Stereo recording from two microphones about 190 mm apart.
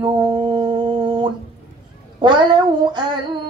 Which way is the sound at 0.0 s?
25° right (ahead or behind).